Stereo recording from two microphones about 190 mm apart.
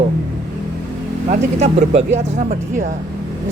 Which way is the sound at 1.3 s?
35° right (ahead or behind).